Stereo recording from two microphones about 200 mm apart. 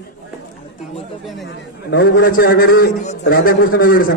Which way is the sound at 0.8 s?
Centre (ahead or behind).